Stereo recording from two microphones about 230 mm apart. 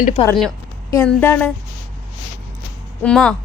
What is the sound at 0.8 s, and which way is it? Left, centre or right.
Speech, centre.